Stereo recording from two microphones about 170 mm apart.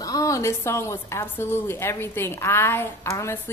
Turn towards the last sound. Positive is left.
turn(degrees=15)  # may be behind; listen again after turning